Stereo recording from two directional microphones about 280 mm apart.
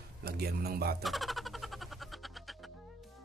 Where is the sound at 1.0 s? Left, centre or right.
Centre.